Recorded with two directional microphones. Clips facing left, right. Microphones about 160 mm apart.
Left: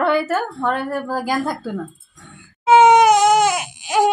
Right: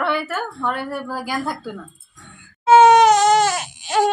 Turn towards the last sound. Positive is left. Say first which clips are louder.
# left 1 dB
turn(degrees=10)  # may be behind; listen again after turning